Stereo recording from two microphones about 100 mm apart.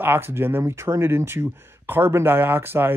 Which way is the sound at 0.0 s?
20° right (ahead or behind).